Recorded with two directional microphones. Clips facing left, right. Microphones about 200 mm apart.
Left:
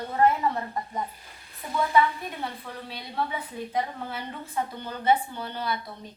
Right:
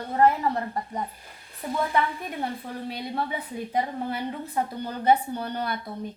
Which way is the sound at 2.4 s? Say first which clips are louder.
Right 4 dB; 45° right (ahead or behind).